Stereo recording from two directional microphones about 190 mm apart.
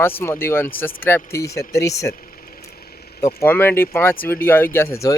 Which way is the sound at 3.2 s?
10° left (ahead or behind).